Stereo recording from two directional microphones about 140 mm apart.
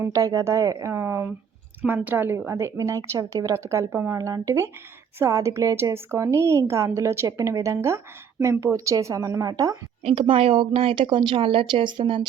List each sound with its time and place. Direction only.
0.0 s a woman's voice: 25° right (ahead or behind)
10.0 s speech: 45° right (ahead or behind)